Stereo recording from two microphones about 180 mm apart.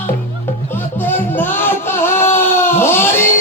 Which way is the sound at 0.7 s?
10° left (ahead or behind).